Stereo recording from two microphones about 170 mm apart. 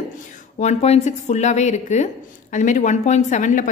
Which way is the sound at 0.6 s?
40° left (ahead or behind).